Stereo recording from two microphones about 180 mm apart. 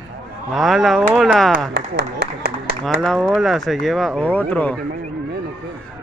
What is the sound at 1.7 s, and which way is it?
Speech, 65° right (ahead or behind).